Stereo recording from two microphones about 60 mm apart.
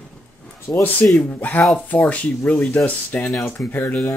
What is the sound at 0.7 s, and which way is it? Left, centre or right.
Speech, left.